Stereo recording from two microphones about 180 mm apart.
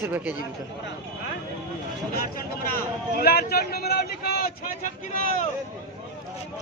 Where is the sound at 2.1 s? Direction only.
55° left (ahead or behind).